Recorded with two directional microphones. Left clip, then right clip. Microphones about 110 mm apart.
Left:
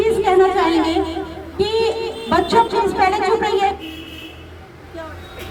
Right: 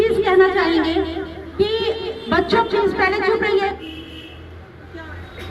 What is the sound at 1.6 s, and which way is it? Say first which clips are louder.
Music: left 2 dB; 15° left (ahead or behind).